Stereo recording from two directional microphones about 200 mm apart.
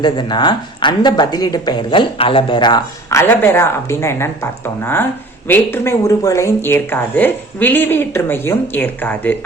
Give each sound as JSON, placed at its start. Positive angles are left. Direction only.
{"t": 0.0, "sound": "speech", "side_deg": 20}